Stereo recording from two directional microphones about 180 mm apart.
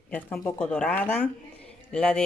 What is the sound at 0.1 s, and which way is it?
Speech, 10° left (ahead or behind).